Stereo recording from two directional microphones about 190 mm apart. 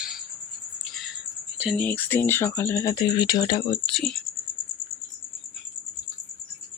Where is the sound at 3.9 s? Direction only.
Centre (ahead or behind).